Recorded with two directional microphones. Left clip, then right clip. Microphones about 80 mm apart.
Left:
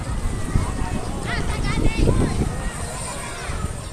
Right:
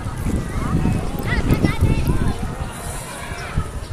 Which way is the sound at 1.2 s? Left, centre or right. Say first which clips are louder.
Right 6 dB; centre.